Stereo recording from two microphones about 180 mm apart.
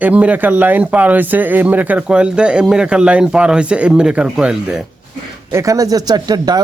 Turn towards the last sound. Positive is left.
turn(degrees=-20)  # may be behind; listen again after turning